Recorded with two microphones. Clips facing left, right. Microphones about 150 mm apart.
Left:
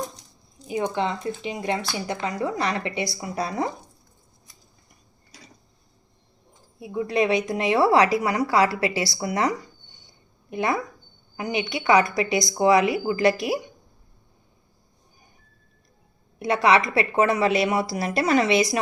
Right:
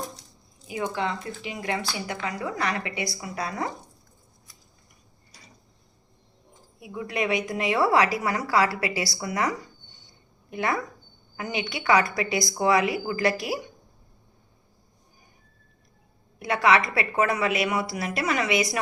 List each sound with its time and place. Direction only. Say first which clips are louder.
0.7 s a woman's voice: left 3 dB; 20° left (ahead or behind)
6.7 s a woman's voice: left 6 dB; 30° left (ahead or behind)
16.4 s a woman's voice: left 2 dB; 25° left (ahead or behind)